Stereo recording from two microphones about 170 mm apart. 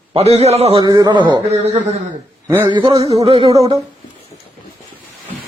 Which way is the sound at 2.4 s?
15° right (ahead or behind).